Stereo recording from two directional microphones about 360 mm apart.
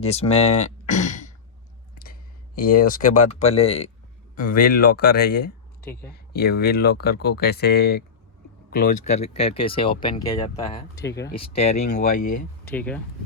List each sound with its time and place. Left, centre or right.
0.0 s speech: centre
0.4 s a sound: centre
2.7 s speech: left
12.7 s speech: centre